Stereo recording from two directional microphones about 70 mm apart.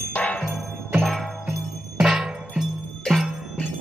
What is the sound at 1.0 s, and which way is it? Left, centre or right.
Jingle bell, centre.